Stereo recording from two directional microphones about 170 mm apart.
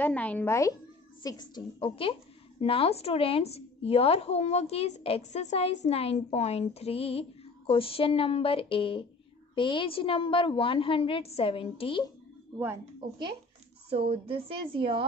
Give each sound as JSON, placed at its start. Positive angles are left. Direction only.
{"t": 0.0, "sound": "a woman's voice", "side_deg": 10}
{"t": 13.8, "sound": "a woman's voice", "side_deg": -35}